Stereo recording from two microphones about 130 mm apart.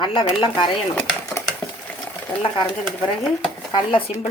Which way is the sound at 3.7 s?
40° left (ahead or behind).